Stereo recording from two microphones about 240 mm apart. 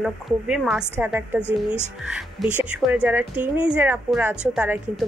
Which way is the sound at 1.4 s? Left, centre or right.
Centre.